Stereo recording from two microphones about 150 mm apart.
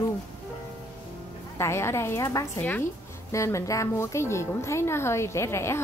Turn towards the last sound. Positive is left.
turn(degrees=15)  # may be behind; listen again after turning